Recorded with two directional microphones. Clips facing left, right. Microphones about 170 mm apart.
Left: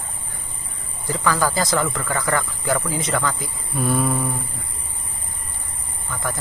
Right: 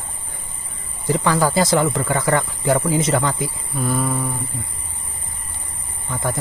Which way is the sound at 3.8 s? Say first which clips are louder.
Left 1 dB; centre (ahead or behind).